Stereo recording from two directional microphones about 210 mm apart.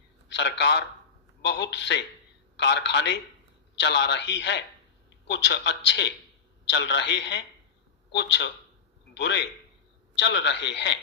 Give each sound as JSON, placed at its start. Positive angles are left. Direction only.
{"t": 0.3, "sound": "a man's voice", "side_deg": 55}